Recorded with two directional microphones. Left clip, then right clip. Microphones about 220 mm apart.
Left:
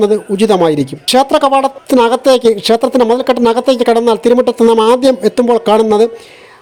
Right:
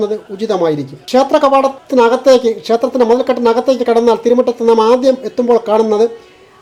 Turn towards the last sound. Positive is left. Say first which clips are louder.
# left 2 dB
turn(degrees=40)  # may be behind; listen again after turning